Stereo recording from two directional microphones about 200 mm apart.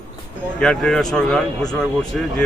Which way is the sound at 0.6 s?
5° left (ahead or behind).